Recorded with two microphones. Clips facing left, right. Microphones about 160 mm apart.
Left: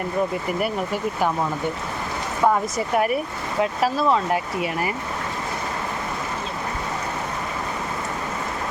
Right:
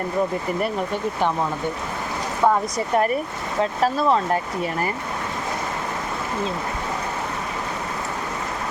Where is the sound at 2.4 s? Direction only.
5° left (ahead or behind).